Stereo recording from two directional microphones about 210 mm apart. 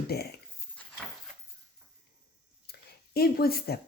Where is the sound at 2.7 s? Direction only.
50° left (ahead or behind).